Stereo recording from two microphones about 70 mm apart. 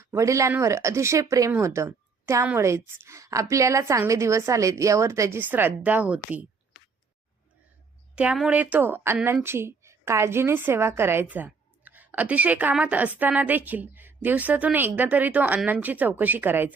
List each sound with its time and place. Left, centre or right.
0.0 s a woman's voice: right
5.4 s a woman's voice: right
8.1 s a woman's voice: centre; by 11.3 s right
11.3 s a sound: right
12.8 s a woman's voice: right